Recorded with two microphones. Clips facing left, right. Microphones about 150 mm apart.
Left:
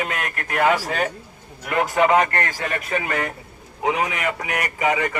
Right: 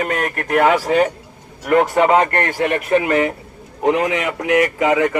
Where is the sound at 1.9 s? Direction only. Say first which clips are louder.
Right 3 dB; 25° right (ahead or behind).